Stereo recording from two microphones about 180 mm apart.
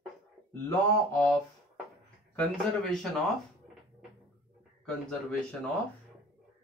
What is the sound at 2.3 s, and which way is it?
Speech, 5° left (ahead or behind).